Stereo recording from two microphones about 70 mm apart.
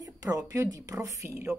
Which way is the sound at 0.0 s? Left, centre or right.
Right.